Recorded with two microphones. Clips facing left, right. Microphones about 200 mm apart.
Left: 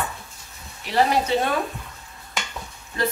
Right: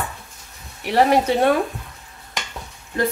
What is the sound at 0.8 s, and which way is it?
Speech, 55° right (ahead or behind).